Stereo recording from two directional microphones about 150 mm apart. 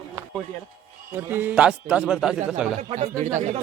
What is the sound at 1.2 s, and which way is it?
A man's voice, 15° right (ahead or behind).